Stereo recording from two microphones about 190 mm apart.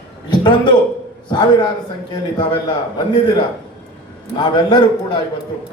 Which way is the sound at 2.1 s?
25° left (ahead or behind).